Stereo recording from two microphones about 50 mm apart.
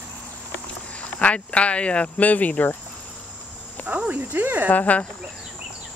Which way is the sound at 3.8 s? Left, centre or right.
Right.